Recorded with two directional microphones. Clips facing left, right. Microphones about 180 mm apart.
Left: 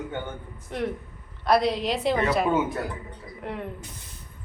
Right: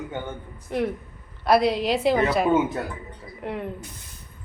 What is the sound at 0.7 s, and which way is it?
A woman's voice, 5° right (ahead or behind).